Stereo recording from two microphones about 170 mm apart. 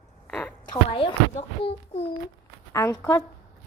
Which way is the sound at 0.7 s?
30° left (ahead or behind).